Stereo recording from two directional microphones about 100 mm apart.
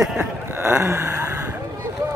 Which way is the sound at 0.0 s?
10° right (ahead or behind).